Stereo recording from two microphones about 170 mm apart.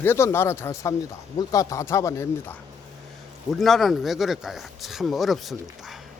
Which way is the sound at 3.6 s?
Centre (ahead or behind).